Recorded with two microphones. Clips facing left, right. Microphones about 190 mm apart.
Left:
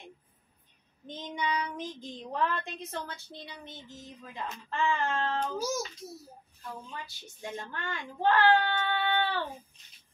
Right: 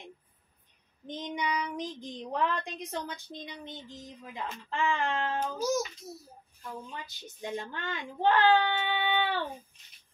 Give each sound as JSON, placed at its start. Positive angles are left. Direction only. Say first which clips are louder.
{"t": 1.0, "sound": "speech", "louder": "right 1 dB", "side_deg": -15}
{"t": 6.9, "sound": "speech", "louder": "even", "side_deg": -20}